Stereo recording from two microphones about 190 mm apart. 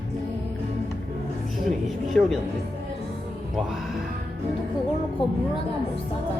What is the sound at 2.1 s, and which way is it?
Speech, 5° left (ahead or behind).